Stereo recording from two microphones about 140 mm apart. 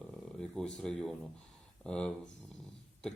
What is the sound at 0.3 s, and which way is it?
Speech, 5° left (ahead or behind).